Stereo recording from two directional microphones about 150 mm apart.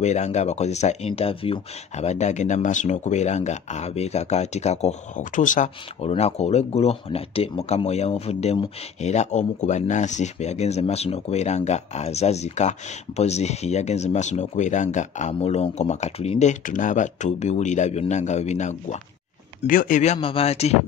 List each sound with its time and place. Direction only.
0.0 s speech: 50° left (ahead or behind)
6.0 s speech: 45° left (ahead or behind)
19.6 s speech: 65° left (ahead or behind); by 20.7 s 45° left (ahead or behind)